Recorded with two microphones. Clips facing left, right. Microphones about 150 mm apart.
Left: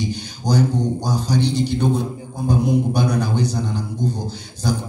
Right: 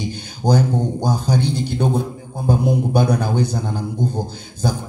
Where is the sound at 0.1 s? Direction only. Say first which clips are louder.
Right 3 dB; 55° right (ahead or behind).